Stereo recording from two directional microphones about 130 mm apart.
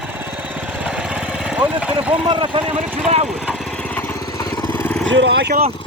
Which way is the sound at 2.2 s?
40° right (ahead or behind).